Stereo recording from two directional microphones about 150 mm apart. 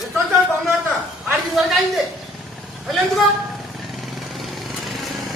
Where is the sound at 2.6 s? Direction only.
Centre (ahead or behind).